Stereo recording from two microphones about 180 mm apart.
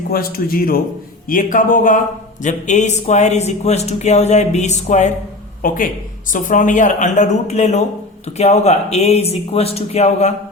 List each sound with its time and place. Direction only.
0.1 s a man's voice: 55° left (ahead or behind); by 10.3 s 35° left (ahead or behind)